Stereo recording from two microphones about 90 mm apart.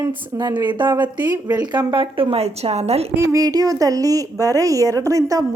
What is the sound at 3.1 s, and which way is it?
A woman's voice, 35° right (ahead or behind).